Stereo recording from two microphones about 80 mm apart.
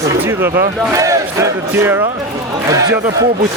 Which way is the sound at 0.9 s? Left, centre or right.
Right.